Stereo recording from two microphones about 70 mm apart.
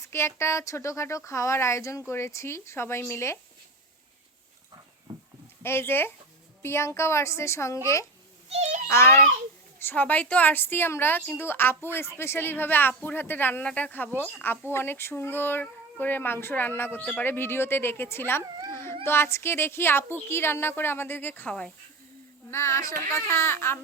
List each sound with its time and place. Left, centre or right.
0.0 s speech: left
5.1 s sheep: right
5.6 s speech: left
8.9 s speech: left
9.8 s a woman's voice: left
22.4 s speech: left
23.3 s speech: left